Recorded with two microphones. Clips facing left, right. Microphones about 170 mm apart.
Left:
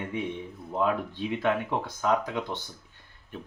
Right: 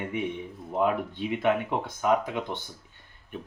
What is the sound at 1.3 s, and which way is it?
Speech, 15° right (ahead or behind).